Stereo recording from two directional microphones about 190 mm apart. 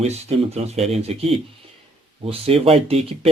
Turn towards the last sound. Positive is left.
turn(degrees=-30)  # may be behind; listen again after turning